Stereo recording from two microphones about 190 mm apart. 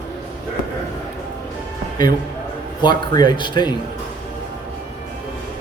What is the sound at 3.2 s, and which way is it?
Speech, 25° left (ahead or behind).